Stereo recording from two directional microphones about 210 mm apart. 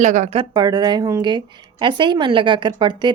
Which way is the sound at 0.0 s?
35° right (ahead or behind).